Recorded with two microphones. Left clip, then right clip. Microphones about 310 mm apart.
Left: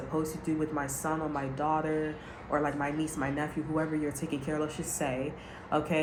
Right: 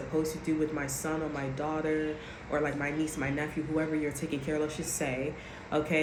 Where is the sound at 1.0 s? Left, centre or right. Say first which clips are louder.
Left 1 dB; left.